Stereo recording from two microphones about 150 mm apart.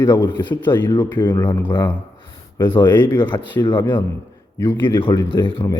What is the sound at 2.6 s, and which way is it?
Speech, 30° left (ahead or behind).